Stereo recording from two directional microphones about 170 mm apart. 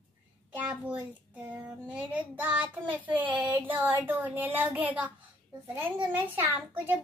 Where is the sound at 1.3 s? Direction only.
10° right (ahead or behind).